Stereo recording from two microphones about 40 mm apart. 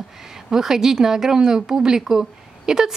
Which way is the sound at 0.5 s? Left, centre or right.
Centre.